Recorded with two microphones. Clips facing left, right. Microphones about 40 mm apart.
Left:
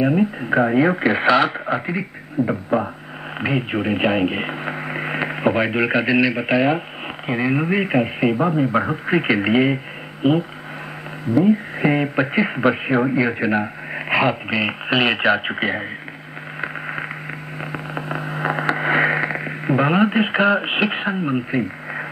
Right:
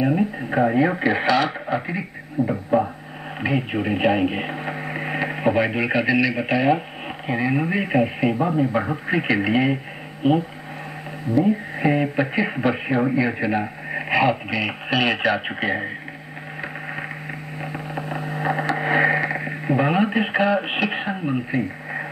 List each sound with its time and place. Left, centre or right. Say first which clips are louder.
0.0 s speech: left 3 dB; centre
11.4 s speech: left 3 dB; centre
17.6 s a sound: left 2 dB; left
18.8 s radio: even; centre